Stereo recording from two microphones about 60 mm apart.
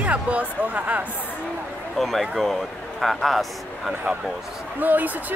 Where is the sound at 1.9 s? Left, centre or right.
Centre.